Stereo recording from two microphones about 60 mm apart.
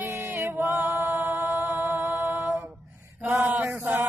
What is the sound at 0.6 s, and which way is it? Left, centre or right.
Music, right.